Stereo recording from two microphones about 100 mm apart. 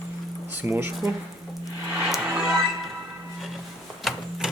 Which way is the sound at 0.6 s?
20° right (ahead or behind).